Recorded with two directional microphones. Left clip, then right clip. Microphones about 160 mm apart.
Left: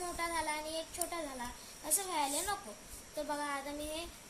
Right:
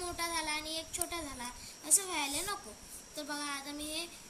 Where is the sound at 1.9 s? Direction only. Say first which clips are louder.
Right 1 dB; 30° left (ahead or behind).